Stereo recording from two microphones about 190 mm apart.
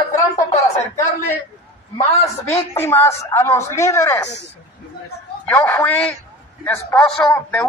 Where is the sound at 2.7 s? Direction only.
15° left (ahead or behind).